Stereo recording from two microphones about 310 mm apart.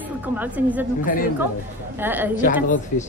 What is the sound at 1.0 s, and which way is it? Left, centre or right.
Speech, left.